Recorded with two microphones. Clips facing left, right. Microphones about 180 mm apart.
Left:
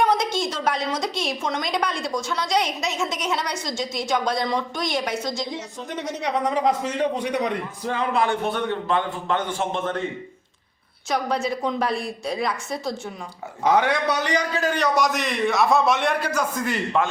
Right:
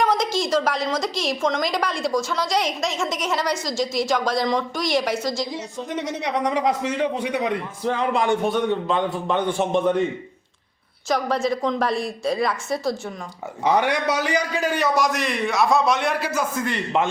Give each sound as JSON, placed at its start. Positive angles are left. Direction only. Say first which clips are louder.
{"t": 0.3, "sound": "a woman's voice", "louder": "right 3 dB", "side_deg": 0}
{"t": 6.5, "sound": "a man's voice", "louder": "even", "side_deg": -10}
{"t": 11.1, "sound": "a woman's voice", "louder": "right 2 dB", "side_deg": 0}
{"t": 13.7, "sound": "a woman's voice", "louder": "even", "side_deg": -15}